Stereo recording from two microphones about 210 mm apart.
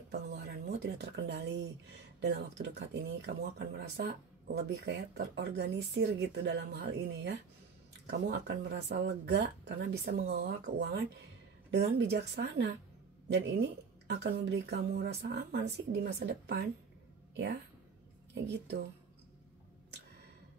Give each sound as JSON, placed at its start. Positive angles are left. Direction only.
{"t": 0.1, "sound": "a sound", "side_deg": -50}
{"t": 2.1, "sound": "speech", "side_deg": -55}
{"t": 18.3, "sound": "speech", "side_deg": -55}